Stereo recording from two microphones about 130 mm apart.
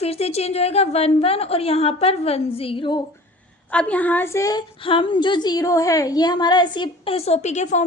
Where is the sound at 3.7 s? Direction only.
10° left (ahead or behind); by 4.6 s 25° left (ahead or behind).